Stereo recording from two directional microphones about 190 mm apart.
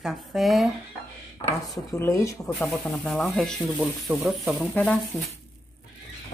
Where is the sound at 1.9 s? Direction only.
15° left (ahead or behind).